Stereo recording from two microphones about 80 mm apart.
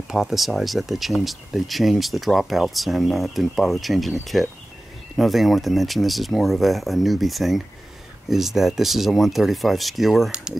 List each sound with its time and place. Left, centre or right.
0.1 s speech: centre